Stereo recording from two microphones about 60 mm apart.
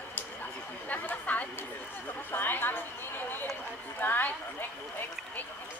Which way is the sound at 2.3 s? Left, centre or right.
Left.